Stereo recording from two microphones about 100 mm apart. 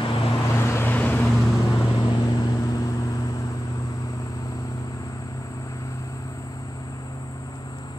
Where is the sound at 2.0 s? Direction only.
45° left (ahead or behind).